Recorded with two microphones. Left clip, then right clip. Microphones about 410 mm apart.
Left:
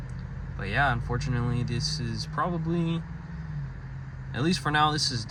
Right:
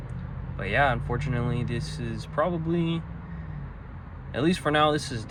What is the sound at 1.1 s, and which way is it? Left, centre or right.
Speech, centre.